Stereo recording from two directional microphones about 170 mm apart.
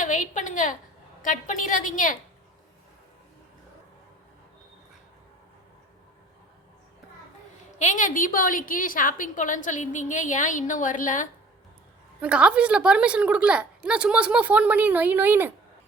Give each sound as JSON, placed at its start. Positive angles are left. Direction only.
{"t": 0.0, "sound": "a woman's voice", "side_deg": 50}
{"t": 7.8, "sound": "a woman's voice", "side_deg": 50}
{"t": 12.2, "sound": "a woman's voice", "side_deg": -5}